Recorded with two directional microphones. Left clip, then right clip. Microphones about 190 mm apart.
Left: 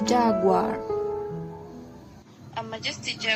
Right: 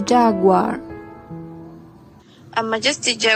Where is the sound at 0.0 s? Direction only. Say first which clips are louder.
Right 6 dB; 25° right (ahead or behind).